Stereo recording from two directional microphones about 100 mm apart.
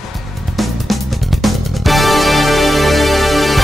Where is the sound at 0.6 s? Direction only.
Centre (ahead or behind).